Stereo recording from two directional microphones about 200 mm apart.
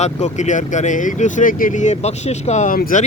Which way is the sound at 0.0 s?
35° left (ahead or behind).